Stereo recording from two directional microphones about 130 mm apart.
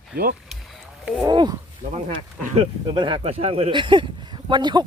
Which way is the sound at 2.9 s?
40° right (ahead or behind).